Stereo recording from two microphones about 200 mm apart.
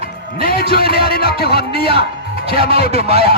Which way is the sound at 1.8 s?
25° right (ahead or behind).